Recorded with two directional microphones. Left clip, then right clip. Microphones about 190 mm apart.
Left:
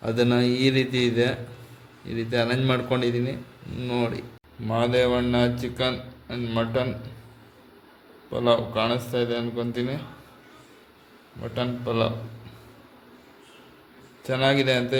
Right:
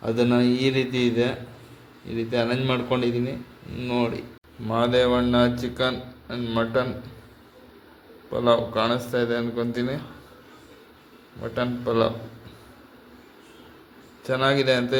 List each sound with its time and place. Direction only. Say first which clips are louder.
0.0 s speech: right 1 dB; 15° left (ahead or behind)
8.3 s speech: right 1 dB; 10° left (ahead or behind)
11.5 s speech: right 3 dB; 5° left (ahead or behind)
14.3 s speech: right 1 dB; 15° left (ahead or behind)